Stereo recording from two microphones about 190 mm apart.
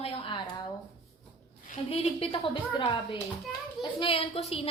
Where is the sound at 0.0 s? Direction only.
25° left (ahead or behind).